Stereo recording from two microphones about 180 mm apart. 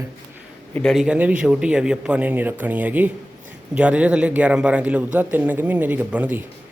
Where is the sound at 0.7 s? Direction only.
5° left (ahead or behind).